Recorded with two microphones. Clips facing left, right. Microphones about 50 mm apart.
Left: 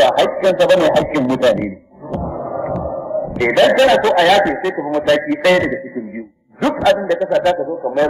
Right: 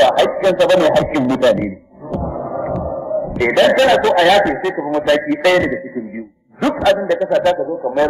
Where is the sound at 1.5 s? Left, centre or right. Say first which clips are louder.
Even; centre.